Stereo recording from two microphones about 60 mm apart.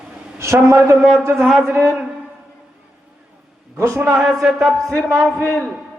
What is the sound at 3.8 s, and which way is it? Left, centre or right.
Speech, right.